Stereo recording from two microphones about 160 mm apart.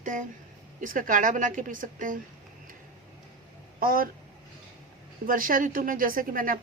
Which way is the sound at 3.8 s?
65° right (ahead or behind).